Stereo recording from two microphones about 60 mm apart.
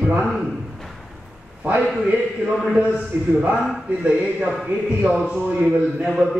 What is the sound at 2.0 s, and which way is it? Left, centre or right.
A man's voice, right.